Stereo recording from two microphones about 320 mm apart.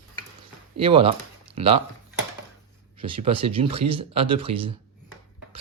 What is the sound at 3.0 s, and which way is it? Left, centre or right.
Speech, centre.